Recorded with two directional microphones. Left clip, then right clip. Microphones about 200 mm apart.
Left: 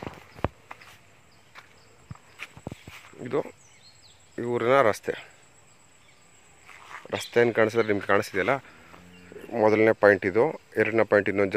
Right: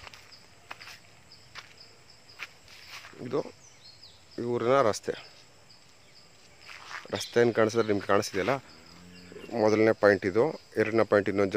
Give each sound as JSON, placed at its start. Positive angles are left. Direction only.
{"t": 2.3, "sound": "walk", "side_deg": 50}
{"t": 3.2, "sound": "speech", "side_deg": 0}
{"t": 6.7, "sound": "a sound", "side_deg": 50}
{"t": 7.1, "sound": "speech", "side_deg": -5}